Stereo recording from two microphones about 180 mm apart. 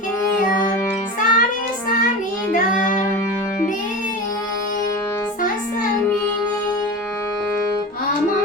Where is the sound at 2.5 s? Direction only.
50° left (ahead or behind).